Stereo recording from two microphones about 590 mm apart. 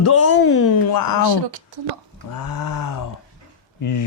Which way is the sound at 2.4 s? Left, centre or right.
Left.